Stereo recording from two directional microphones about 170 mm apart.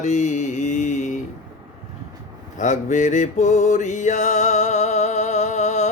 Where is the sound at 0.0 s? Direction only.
45° left (ahead or behind).